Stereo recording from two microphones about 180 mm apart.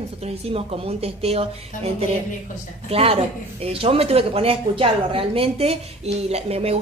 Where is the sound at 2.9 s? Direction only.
35° right (ahead or behind).